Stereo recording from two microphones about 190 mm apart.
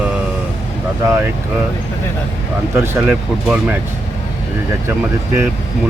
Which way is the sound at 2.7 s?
10° right (ahead or behind).